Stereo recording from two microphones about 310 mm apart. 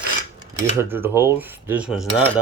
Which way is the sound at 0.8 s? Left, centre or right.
Centre.